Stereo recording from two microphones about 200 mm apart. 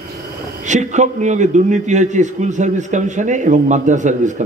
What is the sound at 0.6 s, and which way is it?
A man's voice, 35° right (ahead or behind).